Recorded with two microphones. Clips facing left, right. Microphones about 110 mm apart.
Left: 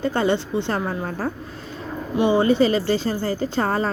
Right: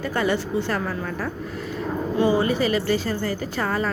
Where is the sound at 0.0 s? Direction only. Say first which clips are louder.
Left 2 dB; 30° left (ahead or behind).